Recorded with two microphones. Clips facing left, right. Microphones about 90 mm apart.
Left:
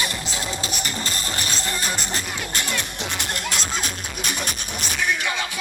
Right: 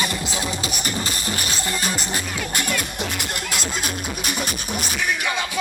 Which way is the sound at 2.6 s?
5° right (ahead or behind).